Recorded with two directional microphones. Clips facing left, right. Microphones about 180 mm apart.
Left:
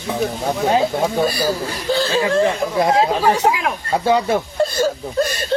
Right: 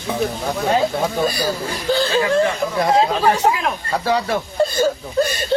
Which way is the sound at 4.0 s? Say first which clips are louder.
Left 3 dB; 25° left (ahead or behind).